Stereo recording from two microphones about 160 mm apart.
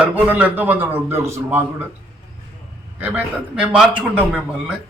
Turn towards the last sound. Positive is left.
turn(degrees=-10)  # may be behind; listen again after turning